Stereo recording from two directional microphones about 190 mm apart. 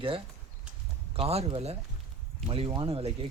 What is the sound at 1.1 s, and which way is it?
Speech, 30° right (ahead or behind).